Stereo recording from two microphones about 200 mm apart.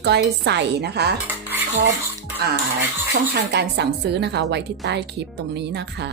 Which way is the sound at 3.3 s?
60° right (ahead or behind).